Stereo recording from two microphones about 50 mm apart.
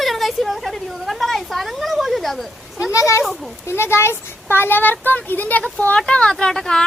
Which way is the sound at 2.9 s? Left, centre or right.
Left.